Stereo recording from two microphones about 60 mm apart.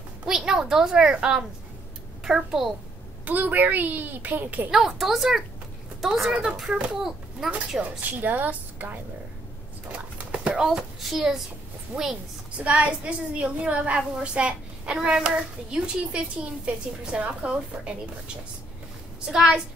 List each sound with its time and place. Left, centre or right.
0.4 s a child's voice: centre
3.3 s speech: right
4.6 s a child's voice: centre
8.2 s a woman's voice: right
10.1 s a sound: centre
10.5 s a child's voice: centre
19.2 s a child's voice: centre